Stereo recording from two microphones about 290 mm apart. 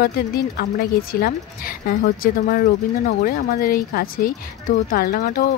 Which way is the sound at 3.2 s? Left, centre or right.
Left.